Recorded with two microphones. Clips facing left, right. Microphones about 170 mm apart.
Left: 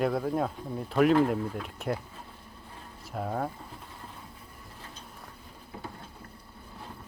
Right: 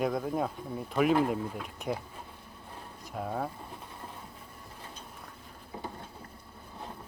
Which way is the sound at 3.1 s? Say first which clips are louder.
Left 2 dB; centre (ahead or behind).